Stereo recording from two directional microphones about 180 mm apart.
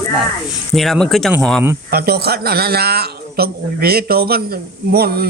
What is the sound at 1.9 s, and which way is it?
A man's voice, 60° right (ahead or behind).